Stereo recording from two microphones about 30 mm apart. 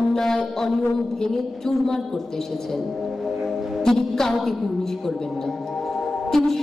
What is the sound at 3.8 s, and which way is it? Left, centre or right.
Music, centre.